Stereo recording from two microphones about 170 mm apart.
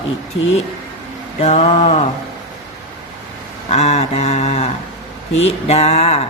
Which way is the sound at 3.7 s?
40° left (ahead or behind).